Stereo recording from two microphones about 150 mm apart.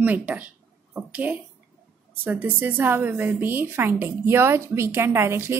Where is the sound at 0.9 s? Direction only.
10° right (ahead or behind).